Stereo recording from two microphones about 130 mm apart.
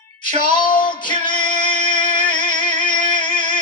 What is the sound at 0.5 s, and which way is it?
Music, 35° left (ahead or behind).